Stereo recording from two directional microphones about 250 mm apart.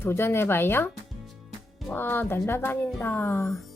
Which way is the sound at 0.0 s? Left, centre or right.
Centre.